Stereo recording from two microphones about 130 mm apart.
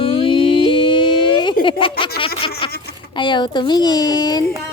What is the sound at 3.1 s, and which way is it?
A woman's voice, 40° left (ahead or behind).